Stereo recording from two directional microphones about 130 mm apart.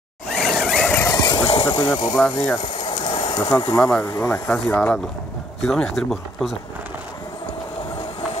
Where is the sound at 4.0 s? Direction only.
20° left (ahead or behind); by 6.5 s centre (ahead or behind).